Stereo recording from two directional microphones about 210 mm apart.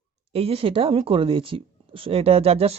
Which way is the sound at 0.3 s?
25° right (ahead or behind).